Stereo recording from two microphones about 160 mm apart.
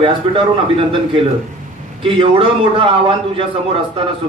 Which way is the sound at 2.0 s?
35° right (ahead or behind).